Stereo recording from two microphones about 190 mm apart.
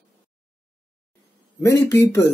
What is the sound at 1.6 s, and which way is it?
Speech, 15° left (ahead or behind).